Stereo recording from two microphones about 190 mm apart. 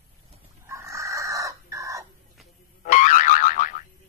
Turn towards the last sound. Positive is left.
turn(degrees=45)  # may be behind; listen again after turning